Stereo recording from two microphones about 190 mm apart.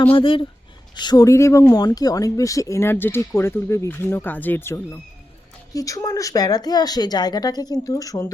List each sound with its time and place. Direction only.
0.0 s speech: 25° left (ahead or behind)